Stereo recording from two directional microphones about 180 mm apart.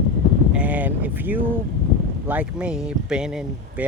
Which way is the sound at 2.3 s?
5° right (ahead or behind).